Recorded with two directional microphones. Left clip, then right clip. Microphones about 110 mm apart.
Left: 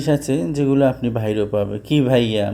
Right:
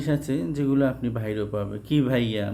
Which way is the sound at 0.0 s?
45° left (ahead or behind).